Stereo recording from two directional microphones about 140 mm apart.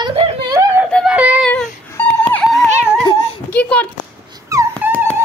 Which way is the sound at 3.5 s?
10° left (ahead or behind).